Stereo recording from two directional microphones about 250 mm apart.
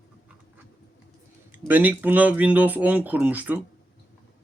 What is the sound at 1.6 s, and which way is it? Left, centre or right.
Speech, centre.